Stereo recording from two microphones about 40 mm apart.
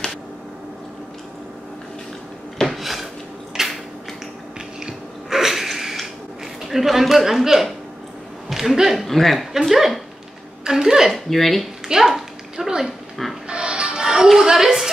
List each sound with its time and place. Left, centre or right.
2.6 s drawer open or close: centre
3.6 s a sound: centre
4.8 s a sound: centre
6.7 s a man's voice: centre
9.0 s a man's voice: centre
9.5 s a man's voice: centre
11.1 s a man's voice: centre
11.9 s a child's voice: centre
12.5 s dog: centre
13.5 s music: right
14.0 s a sound: centre